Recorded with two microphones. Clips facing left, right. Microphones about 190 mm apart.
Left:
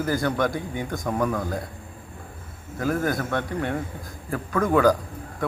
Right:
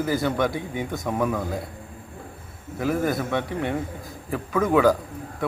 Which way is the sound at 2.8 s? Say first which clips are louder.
Right 1 dB; 5° right (ahead or behind).